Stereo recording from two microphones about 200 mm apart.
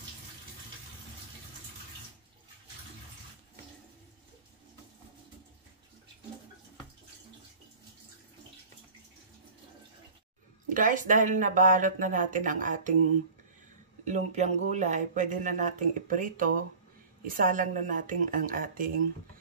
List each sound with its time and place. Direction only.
10.7 s speech: 40° right (ahead or behind)
14.0 s speech: 35° right (ahead or behind)